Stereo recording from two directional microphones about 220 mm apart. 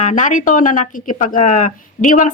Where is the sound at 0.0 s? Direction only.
35° left (ahead or behind).